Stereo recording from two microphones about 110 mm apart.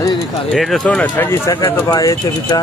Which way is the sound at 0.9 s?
15° left (ahead or behind).